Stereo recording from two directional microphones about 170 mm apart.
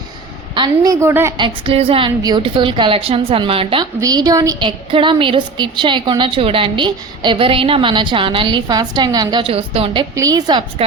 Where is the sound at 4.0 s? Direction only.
20° right (ahead or behind).